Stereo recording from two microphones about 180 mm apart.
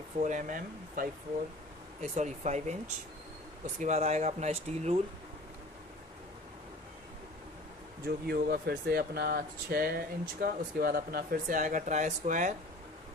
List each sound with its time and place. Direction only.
0.2 s speech: 45° right (ahead or behind)
8.0 s speech: 60° right (ahead or behind); by 12.5 s 45° right (ahead or behind)